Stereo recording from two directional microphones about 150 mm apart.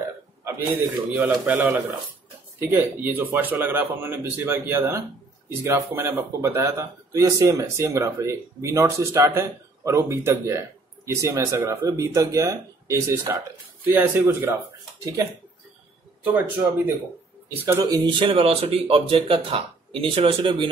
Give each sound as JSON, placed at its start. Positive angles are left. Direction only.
{"t": 1.1, "sound": "a man's voice", "side_deg": -10}
{"t": 16.3, "sound": "speech", "side_deg": -15}